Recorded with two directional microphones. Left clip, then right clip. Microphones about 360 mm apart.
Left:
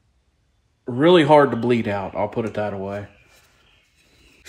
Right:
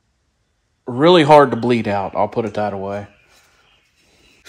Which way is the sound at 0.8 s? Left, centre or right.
Right.